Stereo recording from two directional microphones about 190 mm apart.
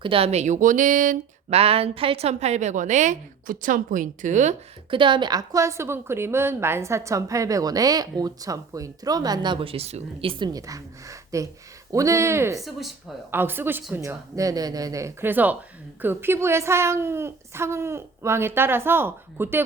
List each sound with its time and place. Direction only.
0.0 s speech: 30° right (ahead or behind)
4.9 s a woman's voice: 25° right (ahead or behind)
12.5 s speech: centre (ahead or behind)
13.3 s a woman's voice: 10° right (ahead or behind)